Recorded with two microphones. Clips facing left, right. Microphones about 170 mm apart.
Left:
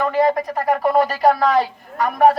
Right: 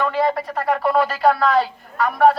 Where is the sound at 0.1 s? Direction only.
45° left (ahead or behind).